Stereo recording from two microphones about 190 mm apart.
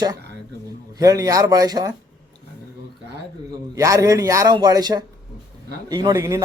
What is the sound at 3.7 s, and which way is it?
Speech, 15° right (ahead or behind).